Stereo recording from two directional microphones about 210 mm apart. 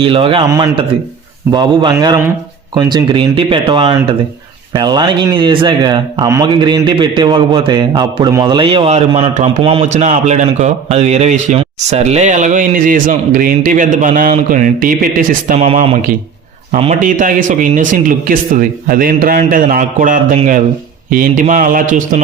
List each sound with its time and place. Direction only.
0.0 s a man's voice: 25° right (ahead or behind)